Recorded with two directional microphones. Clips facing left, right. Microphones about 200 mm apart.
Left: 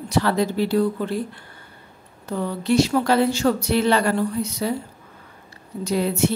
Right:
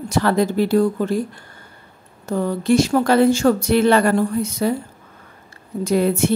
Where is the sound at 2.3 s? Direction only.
45° right (ahead or behind).